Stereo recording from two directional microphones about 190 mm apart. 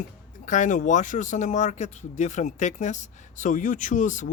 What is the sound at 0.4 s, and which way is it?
Speech, 40° left (ahead or behind).